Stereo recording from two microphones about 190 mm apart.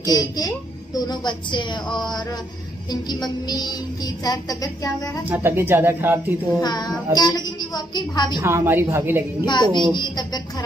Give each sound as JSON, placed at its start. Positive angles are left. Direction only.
{"t": 0.1, "sound": "a woman's voice", "side_deg": 20}
{"t": 5.3, "sound": "speech", "side_deg": -10}
{"t": 6.6, "sound": "a woman's voice", "side_deg": 20}
{"t": 8.4, "sound": "speech", "side_deg": -15}
{"t": 9.4, "sound": "a woman's voice", "side_deg": 25}